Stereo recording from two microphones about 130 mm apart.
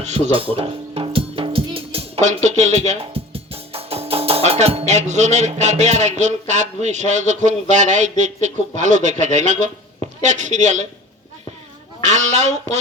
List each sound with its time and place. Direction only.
0.0 s a man's voice: 50° right (ahead or behind); by 10.8 s 65° right (ahead or behind)
12.0 s speech: 60° right (ahead or behind)